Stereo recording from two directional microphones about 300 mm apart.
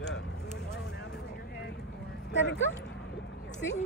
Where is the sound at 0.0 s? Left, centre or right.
Left.